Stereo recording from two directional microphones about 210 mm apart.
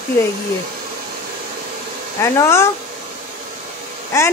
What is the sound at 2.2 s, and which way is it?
Speech, 15° left (ahead or behind).